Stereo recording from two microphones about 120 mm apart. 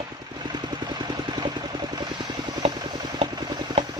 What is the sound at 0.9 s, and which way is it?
Vehicle, 35° right (ahead or behind).